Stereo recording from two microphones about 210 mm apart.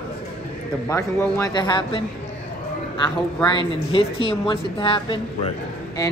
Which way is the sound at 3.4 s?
25° left (ahead or behind).